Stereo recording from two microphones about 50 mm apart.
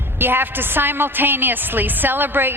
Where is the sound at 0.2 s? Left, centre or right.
Right.